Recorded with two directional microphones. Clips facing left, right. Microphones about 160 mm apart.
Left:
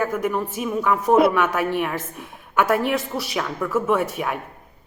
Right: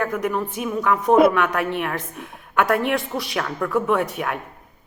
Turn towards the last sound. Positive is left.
turn(degrees=5)  # may be behind; listen again after turning